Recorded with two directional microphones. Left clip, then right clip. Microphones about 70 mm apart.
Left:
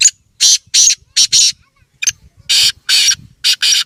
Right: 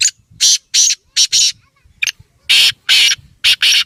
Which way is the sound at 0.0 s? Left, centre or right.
Centre.